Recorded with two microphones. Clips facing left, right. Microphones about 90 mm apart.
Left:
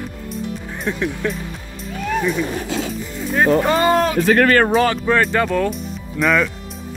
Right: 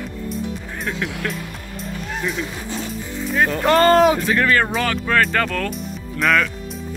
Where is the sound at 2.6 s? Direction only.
90° left.